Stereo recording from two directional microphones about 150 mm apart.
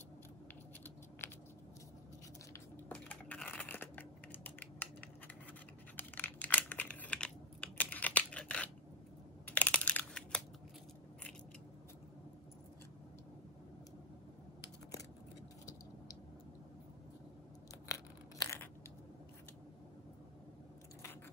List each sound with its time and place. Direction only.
1.2 s scissors: 15° left (ahead or behind)
2.9 s typing: 10° left (ahead or behind)
5.9 s crumpling: 10° left (ahead or behind)
9.5 s a sound: 10° left (ahead or behind)
17.8 s tearing: 20° left (ahead or behind)